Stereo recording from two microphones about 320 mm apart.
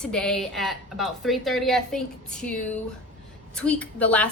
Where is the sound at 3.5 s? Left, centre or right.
Centre.